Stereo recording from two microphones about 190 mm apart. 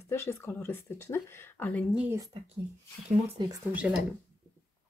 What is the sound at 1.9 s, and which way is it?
Speech, 5° right (ahead or behind).